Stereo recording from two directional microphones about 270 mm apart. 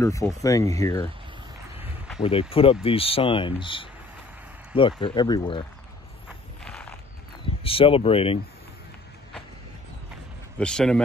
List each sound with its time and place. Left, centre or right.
0.0 s speech: centre
1.8 s a sound: centre
2.2 s speech: left
5.0 s speech: centre
6.6 s a sound: centre
7.6 s speech: centre
10.6 s speech: centre